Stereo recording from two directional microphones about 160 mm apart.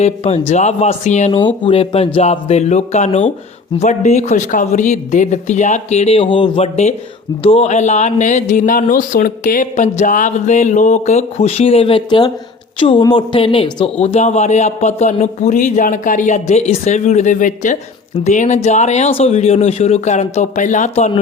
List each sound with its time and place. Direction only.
0.0 s speech: 40° left (ahead or behind)
1.4 s a woman's voice: 30° left (ahead or behind); by 21.1 s 45° left (ahead or behind)